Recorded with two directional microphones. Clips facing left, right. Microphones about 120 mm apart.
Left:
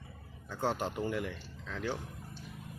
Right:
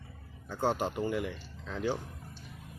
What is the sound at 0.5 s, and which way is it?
Speech, 5° right (ahead or behind).